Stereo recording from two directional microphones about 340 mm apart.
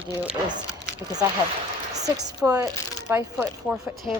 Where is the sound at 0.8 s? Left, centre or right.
Centre.